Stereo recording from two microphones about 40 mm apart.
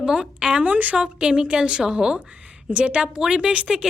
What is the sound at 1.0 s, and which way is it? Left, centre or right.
A woman's voice, right.